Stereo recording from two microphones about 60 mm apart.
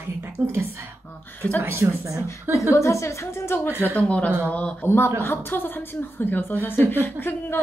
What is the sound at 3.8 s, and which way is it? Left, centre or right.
Speech, left.